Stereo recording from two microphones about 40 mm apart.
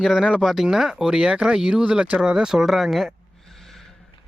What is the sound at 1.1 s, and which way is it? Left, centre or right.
Speech, right.